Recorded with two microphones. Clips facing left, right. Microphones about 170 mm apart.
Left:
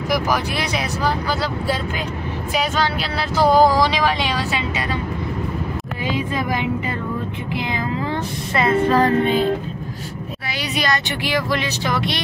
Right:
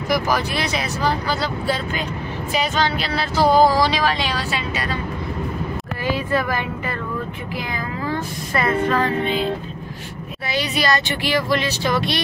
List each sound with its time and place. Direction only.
0.1 s speech: 10° left (ahead or behind)
2.5 s speech: 10° left (ahead or behind)
6.0 s speech: 15° left (ahead or behind)
8.1 s speech: 25° left (ahead or behind)
8.9 s music: 45° left (ahead or behind)
10.8 s speech: 15° left (ahead or behind)